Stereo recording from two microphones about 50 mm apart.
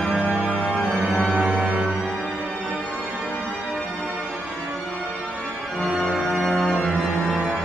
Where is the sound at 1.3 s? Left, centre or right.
Right.